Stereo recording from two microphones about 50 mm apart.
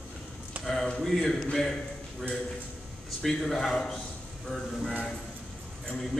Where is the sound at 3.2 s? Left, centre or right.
Centre.